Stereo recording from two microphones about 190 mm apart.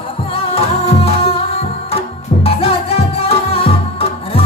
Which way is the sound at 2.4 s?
30° left (ahead or behind).